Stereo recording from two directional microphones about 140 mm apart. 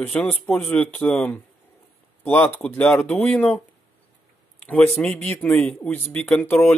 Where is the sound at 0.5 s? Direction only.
10° left (ahead or behind).